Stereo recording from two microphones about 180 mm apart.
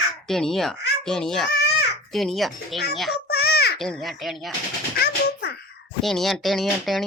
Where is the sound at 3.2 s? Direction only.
60° left (ahead or behind).